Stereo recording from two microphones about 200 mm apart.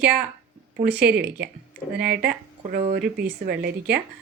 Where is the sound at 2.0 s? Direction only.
50° right (ahead or behind).